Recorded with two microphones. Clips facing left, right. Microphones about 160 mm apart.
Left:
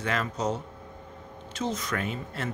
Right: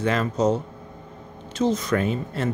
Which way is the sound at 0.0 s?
30° right (ahead or behind).